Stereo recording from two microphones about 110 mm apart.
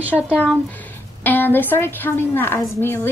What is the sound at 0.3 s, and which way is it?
A woman's voice, 15° left (ahead or behind).